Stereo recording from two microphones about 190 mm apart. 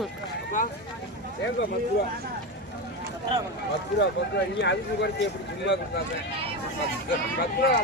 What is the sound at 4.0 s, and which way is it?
Speech, 65° left (ahead or behind).